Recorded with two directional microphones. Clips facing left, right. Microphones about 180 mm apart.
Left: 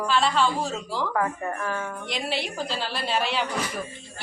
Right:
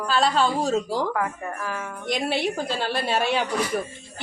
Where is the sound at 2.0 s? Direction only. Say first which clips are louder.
Right 9 dB; 50° right (ahead or behind).